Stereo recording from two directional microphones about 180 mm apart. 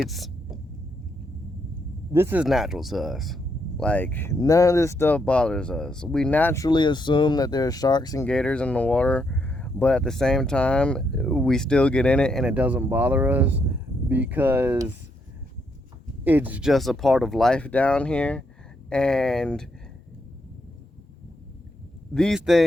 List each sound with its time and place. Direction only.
0.0 s hum: centre (ahead or behind)
2.1 s speech: 10° right (ahead or behind); by 8.3 s 20° left (ahead or behind)
8.3 s speech: 5° left (ahead or behind); by 14.8 s 10° right (ahead or behind)
16.2 s speech: 10° right (ahead or behind)
22.1 s speech: centre (ahead or behind)